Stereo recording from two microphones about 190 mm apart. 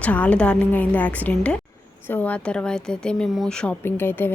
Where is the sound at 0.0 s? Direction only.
5° left (ahead or behind).